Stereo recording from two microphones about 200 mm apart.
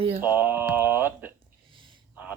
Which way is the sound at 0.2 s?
10° right (ahead or behind).